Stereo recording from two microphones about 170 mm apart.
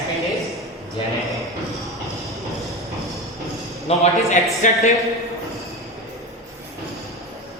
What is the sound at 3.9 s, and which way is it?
Speech, 35° left (ahead or behind).